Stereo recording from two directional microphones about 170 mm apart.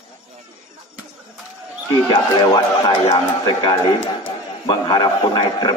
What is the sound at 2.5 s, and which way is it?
Speech, 35° left (ahead or behind).